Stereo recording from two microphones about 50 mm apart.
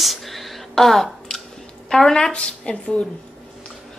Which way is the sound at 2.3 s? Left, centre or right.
Left.